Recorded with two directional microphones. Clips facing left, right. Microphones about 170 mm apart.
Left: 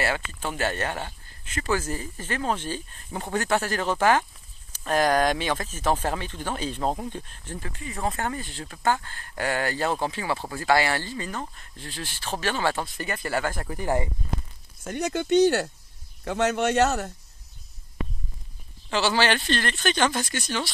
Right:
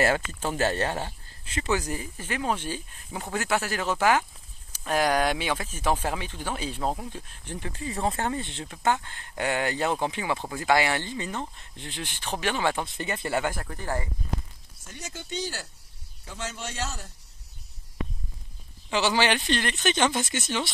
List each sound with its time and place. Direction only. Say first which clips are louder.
0.0 s speech: right 3 dB; 40° right (ahead or behind)
1.6 s speech: left 1 dB; 20° right (ahead or behind)
7.7 s speech: right 1 dB; 30° right (ahead or behind)
13.6 s speech: left 5 dB; 10° left (ahead or behind)
14.9 s a man's voice: left 14 dB; 65° left (ahead or behind)
18.9 s speech: left 1 dB; 15° right (ahead or behind)